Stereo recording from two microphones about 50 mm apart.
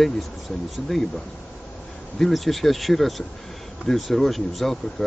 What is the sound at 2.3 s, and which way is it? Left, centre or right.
Speech, centre.